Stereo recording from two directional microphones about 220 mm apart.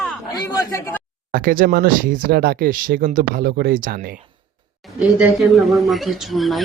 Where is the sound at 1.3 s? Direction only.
40° right (ahead or behind).